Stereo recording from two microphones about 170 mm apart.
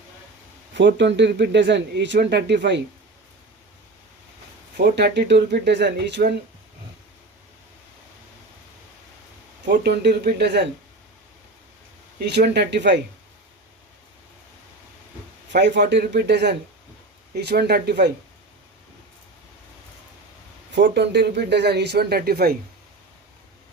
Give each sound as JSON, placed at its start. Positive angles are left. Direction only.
{"t": 0.7, "sound": "speech", "side_deg": -90}
{"t": 4.8, "sound": "speech", "side_deg": -75}
{"t": 9.6, "sound": "speech", "side_deg": -75}
{"t": 12.2, "sound": "speech", "side_deg": -75}
{"t": 15.5, "sound": "speech", "side_deg": -90}
{"t": 17.3, "sound": "speech", "side_deg": -70}
{"t": 20.7, "sound": "speech", "side_deg": -75}